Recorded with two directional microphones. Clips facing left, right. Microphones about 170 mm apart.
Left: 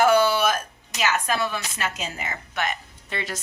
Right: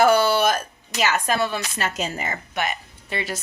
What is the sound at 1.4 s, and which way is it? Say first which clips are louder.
Speech: right 3 dB; 35° right (ahead or behind).